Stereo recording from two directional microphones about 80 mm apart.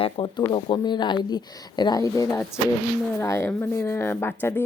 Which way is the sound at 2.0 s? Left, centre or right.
Left.